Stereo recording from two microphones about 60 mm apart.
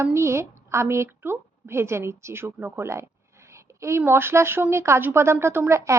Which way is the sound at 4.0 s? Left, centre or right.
Right.